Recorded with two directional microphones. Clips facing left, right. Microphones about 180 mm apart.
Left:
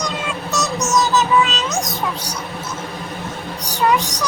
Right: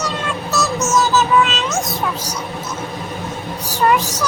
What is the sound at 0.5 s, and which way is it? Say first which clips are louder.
Child singing: right 2 dB; 15° left (ahead or behind).